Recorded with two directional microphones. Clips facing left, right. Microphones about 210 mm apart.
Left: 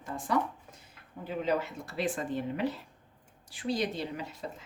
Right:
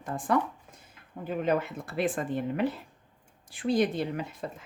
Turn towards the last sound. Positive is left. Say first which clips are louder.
# right 4 dB
turn(degrees=-55)  # may be behind; listen again after turning